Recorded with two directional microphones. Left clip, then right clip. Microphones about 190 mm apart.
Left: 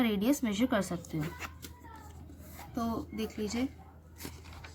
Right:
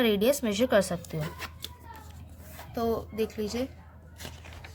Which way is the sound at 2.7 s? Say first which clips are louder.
Right 7 dB; 45° right (ahead or behind).